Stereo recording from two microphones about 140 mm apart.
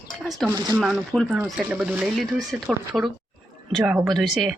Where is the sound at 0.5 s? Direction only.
25° right (ahead or behind).